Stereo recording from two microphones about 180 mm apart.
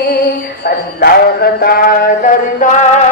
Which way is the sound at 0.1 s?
65° left (ahead or behind).